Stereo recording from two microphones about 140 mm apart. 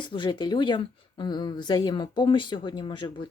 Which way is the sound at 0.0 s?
35° left (ahead or behind).